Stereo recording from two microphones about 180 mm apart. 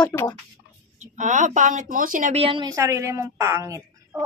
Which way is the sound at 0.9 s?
40° right (ahead or behind).